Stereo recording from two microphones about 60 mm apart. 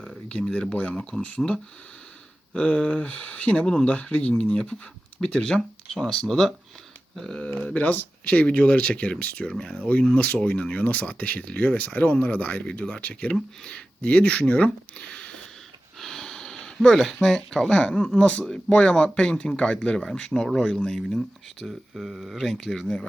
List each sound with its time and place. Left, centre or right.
0.3 s speech: centre
1.4 s speech: centre
2.6 s speech: left
16.0 s a sound: centre
18.2 s speech: left
21.2 s speech: centre